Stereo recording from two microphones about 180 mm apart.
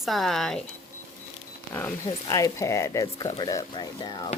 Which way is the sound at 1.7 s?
10° left (ahead or behind).